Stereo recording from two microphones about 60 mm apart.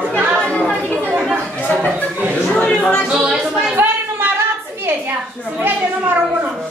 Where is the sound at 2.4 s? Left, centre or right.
Centre.